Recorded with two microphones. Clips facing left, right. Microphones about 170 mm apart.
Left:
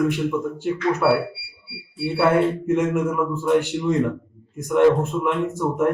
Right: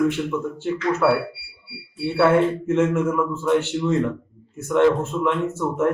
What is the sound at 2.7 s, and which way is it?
A man's voice, 15° left (ahead or behind).